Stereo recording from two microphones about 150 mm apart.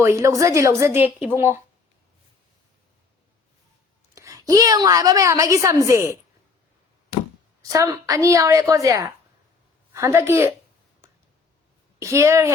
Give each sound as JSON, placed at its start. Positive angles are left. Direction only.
{"t": 0.0, "sound": "a woman's voice", "side_deg": -20}
{"t": 4.1, "sound": "a woman's voice", "side_deg": -20}
{"t": 7.6, "sound": "a woman's voice", "side_deg": -20}
{"t": 11.9, "sound": "a woman's voice", "side_deg": -20}